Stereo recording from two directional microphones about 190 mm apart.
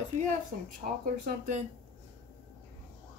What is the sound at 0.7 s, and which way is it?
Speech, 45° right (ahead or behind).